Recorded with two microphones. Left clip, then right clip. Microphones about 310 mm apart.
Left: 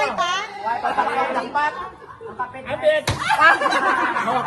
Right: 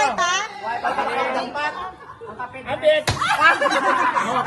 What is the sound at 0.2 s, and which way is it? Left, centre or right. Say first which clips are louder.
Chatter: right 1 dB; right.